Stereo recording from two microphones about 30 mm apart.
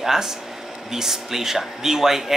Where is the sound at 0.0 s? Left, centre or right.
Centre.